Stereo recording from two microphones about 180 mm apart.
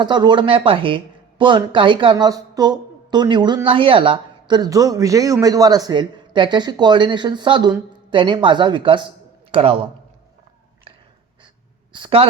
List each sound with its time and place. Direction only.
0.0 s speech: 25° right (ahead or behind)
11.9 s a woman's voice: 30° right (ahead or behind)